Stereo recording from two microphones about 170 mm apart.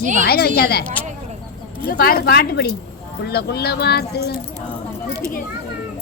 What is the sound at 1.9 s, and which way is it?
A woman's voice, 65° left (ahead or behind).